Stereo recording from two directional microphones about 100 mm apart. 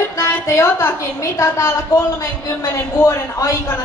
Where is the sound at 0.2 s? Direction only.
30° left (ahead or behind).